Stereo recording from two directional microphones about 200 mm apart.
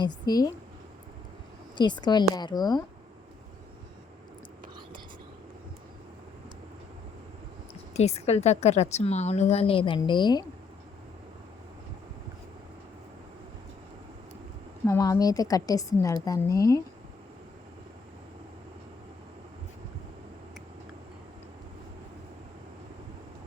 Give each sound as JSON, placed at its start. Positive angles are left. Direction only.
{"t": 0.0, "sound": "speech", "side_deg": 20}
{"t": 1.7, "sound": "speech", "side_deg": 20}
{"t": 7.9, "sound": "a woman's voice", "side_deg": 30}
{"t": 14.8, "sound": "a woman's voice", "side_deg": 15}